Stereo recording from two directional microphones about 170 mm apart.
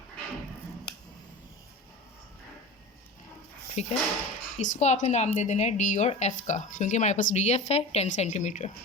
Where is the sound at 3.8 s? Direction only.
45° left (ahead or behind).